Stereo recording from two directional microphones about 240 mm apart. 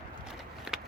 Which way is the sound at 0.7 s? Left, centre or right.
Centre.